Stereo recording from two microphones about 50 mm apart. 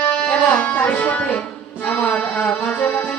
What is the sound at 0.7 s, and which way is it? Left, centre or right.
Speech, left.